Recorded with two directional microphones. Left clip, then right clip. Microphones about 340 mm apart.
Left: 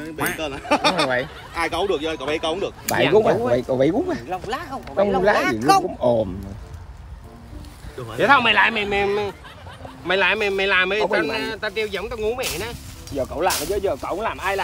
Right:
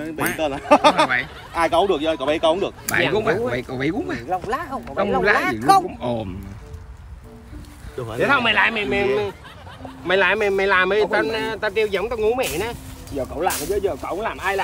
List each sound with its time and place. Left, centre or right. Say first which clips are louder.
0.4 s speech: right 7 dB; centre
3.0 s speech: left 3 dB; centre
8.2 s speech: left 2 dB; centre; by 12.7 s right
13.1 s speech: left 1 dB; centre